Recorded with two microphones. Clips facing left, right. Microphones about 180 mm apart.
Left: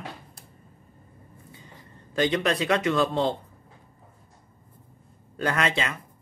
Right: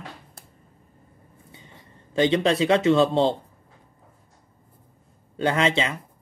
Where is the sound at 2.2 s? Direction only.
25° right (ahead or behind).